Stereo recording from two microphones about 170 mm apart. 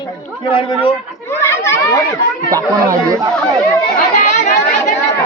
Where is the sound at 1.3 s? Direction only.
15° left (ahead or behind).